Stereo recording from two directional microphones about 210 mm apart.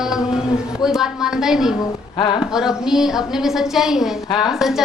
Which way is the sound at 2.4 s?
Centre (ahead or behind).